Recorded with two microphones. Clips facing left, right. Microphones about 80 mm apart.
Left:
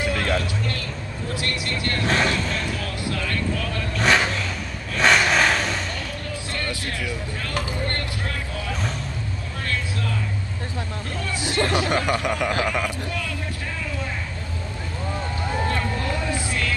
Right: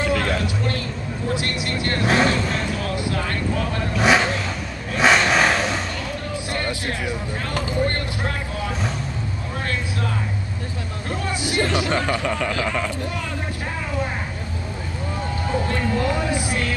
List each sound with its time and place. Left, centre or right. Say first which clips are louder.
0.0 s vehicle: right 2 dB; right
1.3 s speech: right 2 dB; right
2.3 s vehicle: right 3 dB; right
3.9 s vehicle: right 2 dB; centre
6.6 s music: right 3 dB; right
11.2 s hubbub: right 1 dB; right
12.1 s speech: even; centre
15.7 s a sound: right 4 dB; right